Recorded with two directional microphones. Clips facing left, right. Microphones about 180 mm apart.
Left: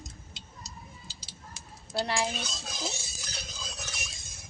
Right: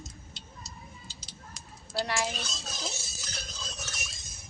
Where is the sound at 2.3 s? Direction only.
Centre (ahead or behind).